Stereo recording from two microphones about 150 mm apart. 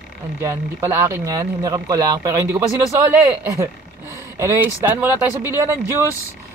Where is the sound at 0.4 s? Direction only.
20° right (ahead or behind).